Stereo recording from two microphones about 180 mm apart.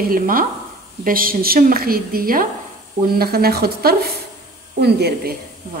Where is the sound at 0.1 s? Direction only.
50° right (ahead or behind).